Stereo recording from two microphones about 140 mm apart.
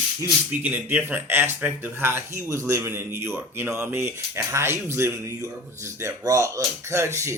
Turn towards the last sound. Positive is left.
turn(degrees=-20)  # may be behind; listen again after turning